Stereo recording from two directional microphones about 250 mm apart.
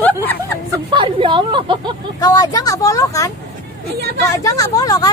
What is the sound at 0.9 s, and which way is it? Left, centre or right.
A woman's voice, centre.